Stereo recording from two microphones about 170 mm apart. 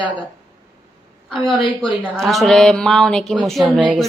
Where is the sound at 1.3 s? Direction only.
Centre (ahead or behind).